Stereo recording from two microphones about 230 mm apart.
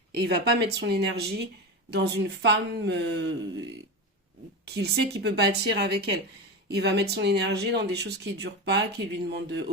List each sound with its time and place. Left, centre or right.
0.1 s speech: right
4.6 s speech: right